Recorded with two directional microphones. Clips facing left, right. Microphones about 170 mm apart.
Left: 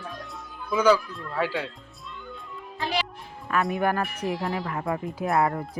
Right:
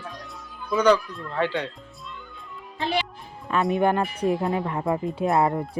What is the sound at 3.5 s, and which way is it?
Speech, 20° right (ahead or behind).